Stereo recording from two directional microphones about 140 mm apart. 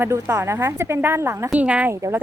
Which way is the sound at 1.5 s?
10° right (ahead or behind).